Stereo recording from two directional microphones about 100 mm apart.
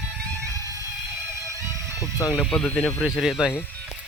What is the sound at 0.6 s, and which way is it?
Music, 35° right (ahead or behind).